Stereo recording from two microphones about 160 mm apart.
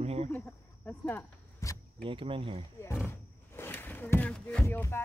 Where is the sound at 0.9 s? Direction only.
15° left (ahead or behind).